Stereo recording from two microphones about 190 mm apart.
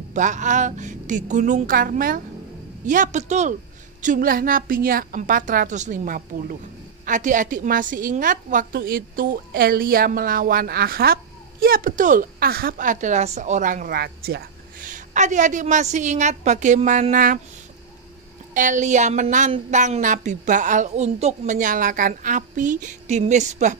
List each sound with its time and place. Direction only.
0.1 s a woman's voice: 40° right (ahead or behind)
18.5 s a woman's voice: 40° right (ahead or behind)